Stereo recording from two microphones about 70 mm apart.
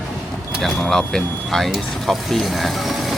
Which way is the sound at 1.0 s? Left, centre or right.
Centre.